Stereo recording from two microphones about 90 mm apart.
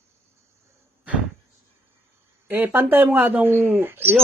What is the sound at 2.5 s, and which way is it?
Speech, 20° right (ahead or behind).